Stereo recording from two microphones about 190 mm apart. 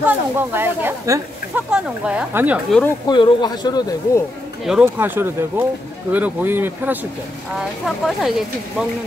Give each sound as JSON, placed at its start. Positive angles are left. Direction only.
{"t": 0.0, "sound": "speech", "side_deg": -10}
{"t": 3.1, "sound": "speech", "side_deg": 25}
{"t": 4.6, "sound": "speech", "side_deg": -5}